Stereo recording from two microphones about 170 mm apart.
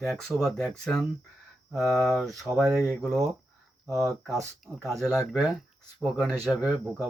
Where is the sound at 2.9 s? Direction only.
Centre (ahead or behind).